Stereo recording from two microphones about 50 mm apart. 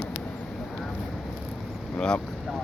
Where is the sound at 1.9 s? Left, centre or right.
Centre.